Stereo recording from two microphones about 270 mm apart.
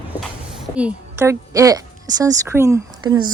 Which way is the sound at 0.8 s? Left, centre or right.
Centre.